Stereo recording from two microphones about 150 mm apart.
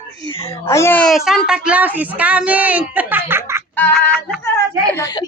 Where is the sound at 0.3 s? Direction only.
40° left (ahead or behind).